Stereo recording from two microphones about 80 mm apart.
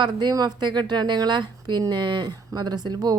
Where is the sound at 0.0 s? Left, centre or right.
Right.